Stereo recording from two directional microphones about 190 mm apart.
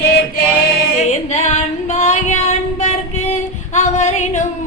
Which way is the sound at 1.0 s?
35° left (ahead or behind).